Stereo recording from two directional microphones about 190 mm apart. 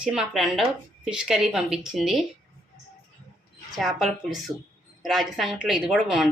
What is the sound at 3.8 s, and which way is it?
A woman's voice, centre (ahead or behind).